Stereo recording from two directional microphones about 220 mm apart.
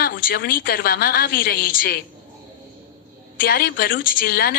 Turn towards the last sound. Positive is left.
turn(degrees=40)  # may be behind; listen again after turning